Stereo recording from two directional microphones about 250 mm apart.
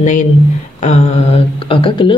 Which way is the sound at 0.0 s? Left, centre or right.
Left.